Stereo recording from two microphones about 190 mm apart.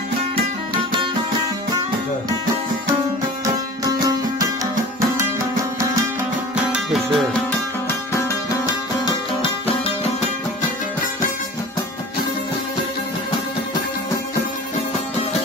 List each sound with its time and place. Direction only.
3.4 s music: 20° right (ahead or behind)
6.7 s music: 5° right (ahead or behind)
8.3 s music: 20° left (ahead or behind)
9.6 s music: 30° left (ahead or behind)